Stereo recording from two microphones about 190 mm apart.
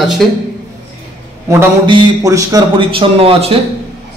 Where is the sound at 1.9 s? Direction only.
20° right (ahead or behind).